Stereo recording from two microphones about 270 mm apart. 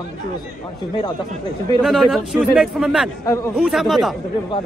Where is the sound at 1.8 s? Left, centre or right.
Centre.